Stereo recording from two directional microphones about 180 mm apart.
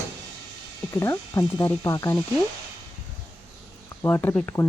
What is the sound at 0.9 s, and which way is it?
Speech, 15° left (ahead or behind).